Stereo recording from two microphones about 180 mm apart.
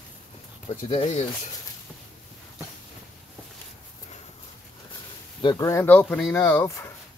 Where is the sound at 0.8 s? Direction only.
40° left (ahead or behind).